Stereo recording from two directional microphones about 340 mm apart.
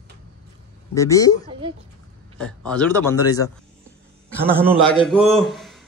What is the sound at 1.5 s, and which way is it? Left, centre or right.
Speech, centre.